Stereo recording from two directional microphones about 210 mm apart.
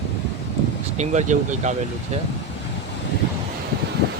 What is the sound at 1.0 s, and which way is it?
Speech, 35° right (ahead or behind).